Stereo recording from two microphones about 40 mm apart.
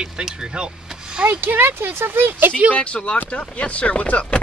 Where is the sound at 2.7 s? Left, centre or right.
Left.